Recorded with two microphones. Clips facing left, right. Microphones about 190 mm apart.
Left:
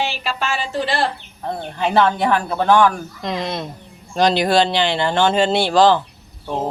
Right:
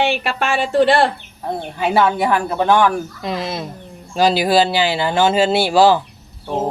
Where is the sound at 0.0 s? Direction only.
55° right (ahead or behind).